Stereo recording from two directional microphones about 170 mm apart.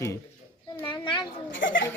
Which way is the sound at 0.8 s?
25° left (ahead or behind).